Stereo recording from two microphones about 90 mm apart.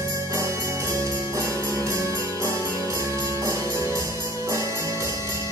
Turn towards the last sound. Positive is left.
turn(degrees=-35)  # may be behind; listen again after turning